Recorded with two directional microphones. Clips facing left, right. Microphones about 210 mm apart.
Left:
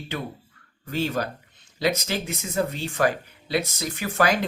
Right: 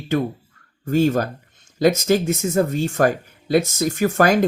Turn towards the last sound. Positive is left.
turn(degrees=-45)  # may be behind; listen again after turning